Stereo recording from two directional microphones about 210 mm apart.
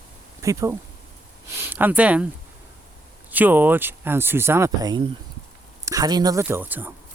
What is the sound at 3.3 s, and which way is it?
Speech, 10° right (ahead or behind).